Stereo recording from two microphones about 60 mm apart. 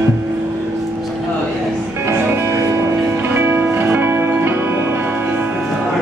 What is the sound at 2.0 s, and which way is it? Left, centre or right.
Music, right.